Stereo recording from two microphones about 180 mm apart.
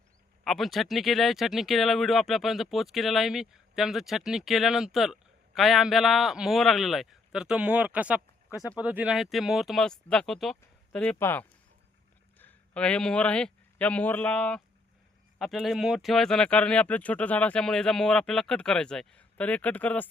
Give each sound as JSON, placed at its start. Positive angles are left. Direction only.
{"t": 0.4, "sound": "speech", "side_deg": 0}
{"t": 8.5, "sound": "speech", "side_deg": 20}
{"t": 8.8, "sound": "a man's voice", "side_deg": -10}